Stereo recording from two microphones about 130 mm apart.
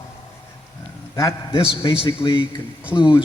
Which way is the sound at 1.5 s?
45° left (ahead or behind).